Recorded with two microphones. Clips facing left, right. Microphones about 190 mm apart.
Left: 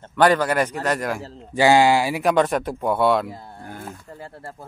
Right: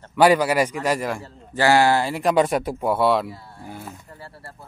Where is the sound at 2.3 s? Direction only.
10° right (ahead or behind).